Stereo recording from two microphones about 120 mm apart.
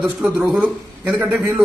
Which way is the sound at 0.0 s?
10° right (ahead or behind).